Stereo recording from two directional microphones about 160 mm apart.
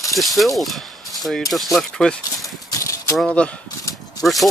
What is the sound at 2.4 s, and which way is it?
Horse, 20° left (ahead or behind).